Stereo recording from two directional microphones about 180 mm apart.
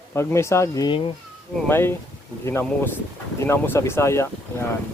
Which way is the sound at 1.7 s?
10° left (ahead or behind).